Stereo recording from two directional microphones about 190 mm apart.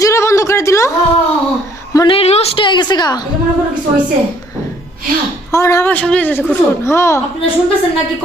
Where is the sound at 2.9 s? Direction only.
20° left (ahead or behind).